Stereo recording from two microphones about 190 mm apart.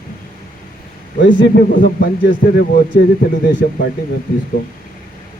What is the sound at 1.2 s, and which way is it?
Speech, 50° left (ahead or behind).